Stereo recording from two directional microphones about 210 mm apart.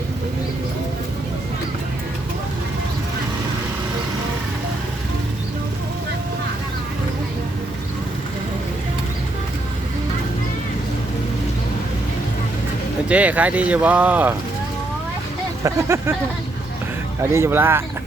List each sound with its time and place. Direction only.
13.1 s speech: 5° right (ahead or behind)
15.6 s speech: 10° right (ahead or behind)
17.3 s speech: 10° right (ahead or behind)